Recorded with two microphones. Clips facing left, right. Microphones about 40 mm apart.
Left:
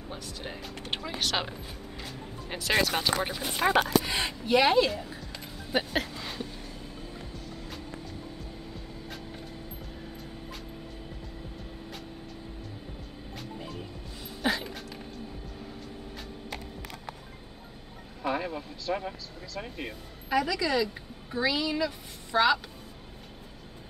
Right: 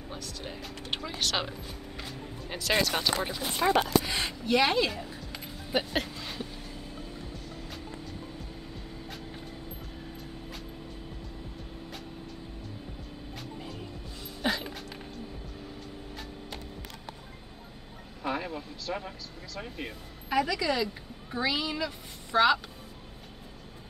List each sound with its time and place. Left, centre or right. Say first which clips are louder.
0.2 s speech: left 1 dB; centre
0.8 s speech: even; centre
2.5 s speech: left 1 dB; centre
3.3 s speech: even; left
3.6 s speech: left 1 dB; left
4.2 s speech: left 2 dB; centre
13.4 s music: left 2 dB; centre
14.4 s a sound: left 1 dB; centre
18.2 s speech: left 2 dB; centre